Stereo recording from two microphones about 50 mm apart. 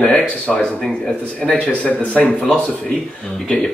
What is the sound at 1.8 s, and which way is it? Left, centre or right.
Speech, left.